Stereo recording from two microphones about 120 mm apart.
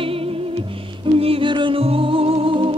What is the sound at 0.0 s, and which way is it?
Music, 50° right (ahead or behind).